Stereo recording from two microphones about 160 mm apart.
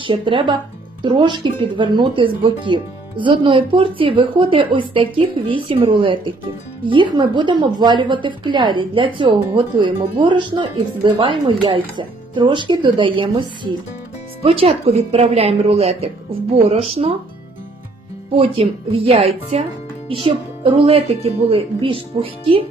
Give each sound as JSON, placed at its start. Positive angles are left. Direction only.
{"t": 0.0, "sound": "speech", "side_deg": -30}
{"t": 18.3, "sound": "speech", "side_deg": -35}